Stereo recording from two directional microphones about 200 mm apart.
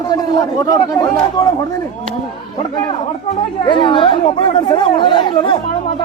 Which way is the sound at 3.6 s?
25° left (ahead or behind).